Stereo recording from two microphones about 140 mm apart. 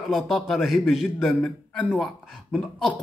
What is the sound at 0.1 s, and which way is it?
A man's voice, centre (ahead or behind).